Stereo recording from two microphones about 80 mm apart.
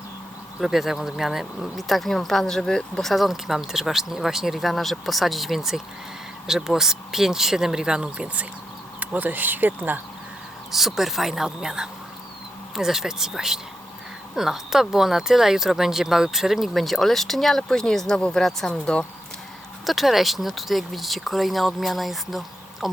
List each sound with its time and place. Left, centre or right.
0.6 s speech: centre; by 10.0 s right
10.7 s speech: centre
19.8 s speech: centre